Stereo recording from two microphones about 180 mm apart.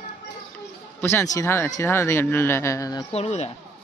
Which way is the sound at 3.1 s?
35° left (ahead or behind).